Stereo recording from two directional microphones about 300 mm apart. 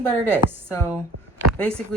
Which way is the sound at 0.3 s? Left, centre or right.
Centre.